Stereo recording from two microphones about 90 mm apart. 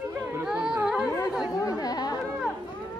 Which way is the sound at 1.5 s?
40° left (ahead or behind).